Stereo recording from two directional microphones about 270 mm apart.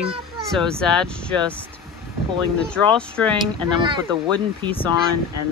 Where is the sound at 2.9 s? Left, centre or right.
Centre.